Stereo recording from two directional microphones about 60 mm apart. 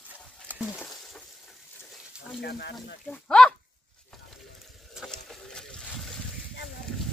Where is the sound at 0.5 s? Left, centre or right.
Right.